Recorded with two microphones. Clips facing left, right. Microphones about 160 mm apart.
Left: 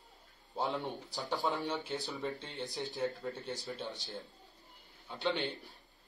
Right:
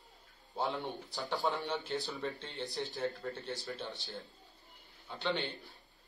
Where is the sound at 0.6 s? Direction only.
Centre (ahead or behind).